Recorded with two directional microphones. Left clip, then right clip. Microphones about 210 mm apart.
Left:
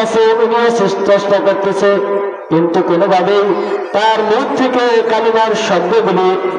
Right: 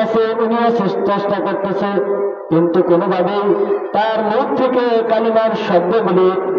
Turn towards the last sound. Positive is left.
turn(degrees=-35)  # may be behind; listen again after turning